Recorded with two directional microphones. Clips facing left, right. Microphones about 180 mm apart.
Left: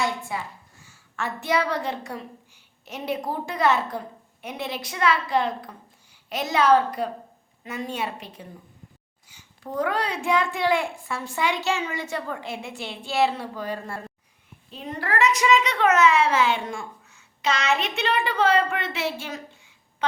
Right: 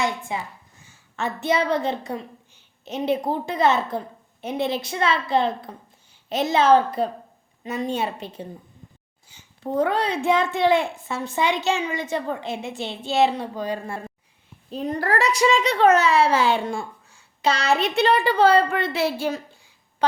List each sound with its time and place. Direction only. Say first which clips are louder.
0.3 s a woman's voice: right 2 dB; 20° right (ahead or behind)
14.7 s a child's voice: right 6 dB; 40° right (ahead or behind)